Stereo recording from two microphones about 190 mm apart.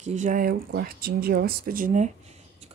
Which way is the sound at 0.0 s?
40° right (ahead or behind).